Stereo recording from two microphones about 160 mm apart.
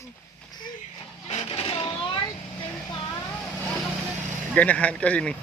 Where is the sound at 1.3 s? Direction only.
35° left (ahead or behind).